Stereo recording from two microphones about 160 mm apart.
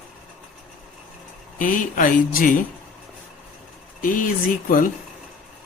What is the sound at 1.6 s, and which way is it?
Speech, 55° left (ahead or behind).